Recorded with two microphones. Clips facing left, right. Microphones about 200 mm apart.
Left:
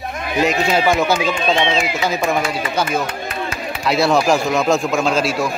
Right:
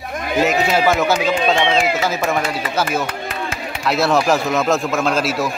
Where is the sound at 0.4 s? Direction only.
Centre (ahead or behind).